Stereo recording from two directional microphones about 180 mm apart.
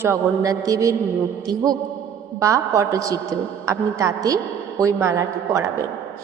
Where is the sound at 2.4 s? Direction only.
20° right (ahead or behind).